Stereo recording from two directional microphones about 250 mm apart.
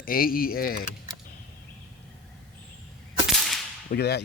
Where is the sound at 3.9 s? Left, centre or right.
Left.